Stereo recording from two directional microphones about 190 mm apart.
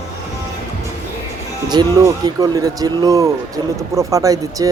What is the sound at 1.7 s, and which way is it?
Speech, 20° right (ahead or behind).